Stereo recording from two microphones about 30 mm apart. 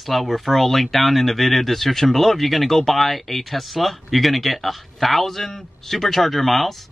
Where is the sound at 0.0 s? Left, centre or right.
Centre.